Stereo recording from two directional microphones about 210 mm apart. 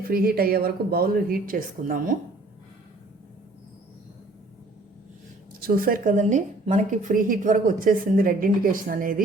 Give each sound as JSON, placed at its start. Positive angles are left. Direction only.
{"t": 0.1, "sound": "speech", "side_deg": -45}
{"t": 5.5, "sound": "a woman's voice", "side_deg": -45}